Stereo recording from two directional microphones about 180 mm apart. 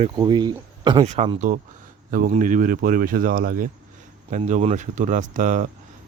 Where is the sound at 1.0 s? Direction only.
35° right (ahead or behind).